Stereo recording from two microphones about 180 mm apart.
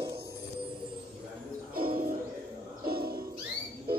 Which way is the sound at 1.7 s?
55° right (ahead or behind).